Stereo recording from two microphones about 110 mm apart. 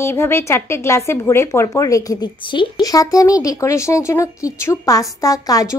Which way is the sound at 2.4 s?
45° left (ahead or behind).